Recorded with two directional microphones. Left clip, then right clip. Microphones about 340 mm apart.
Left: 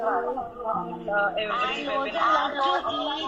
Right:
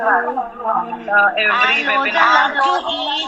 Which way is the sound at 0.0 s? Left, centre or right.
Right.